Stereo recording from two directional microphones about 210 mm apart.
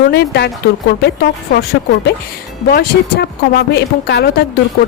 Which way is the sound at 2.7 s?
45° left (ahead or behind).